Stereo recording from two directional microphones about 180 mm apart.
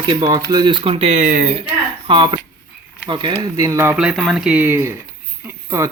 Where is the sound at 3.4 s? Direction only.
20° right (ahead or behind).